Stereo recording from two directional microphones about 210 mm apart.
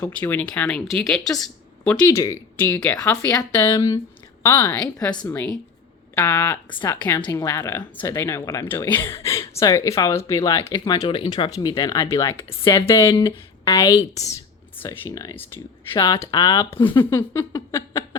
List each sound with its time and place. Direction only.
0.0 s speech: 10° left (ahead or behind)
6.7 s speech: 25° left (ahead or behind)
6.9 s speech: 10° left (ahead or behind)
14.8 s speech: 15° left (ahead or behind)